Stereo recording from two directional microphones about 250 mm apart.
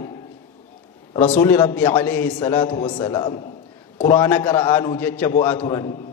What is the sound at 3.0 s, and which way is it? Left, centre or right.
A man's voice, centre.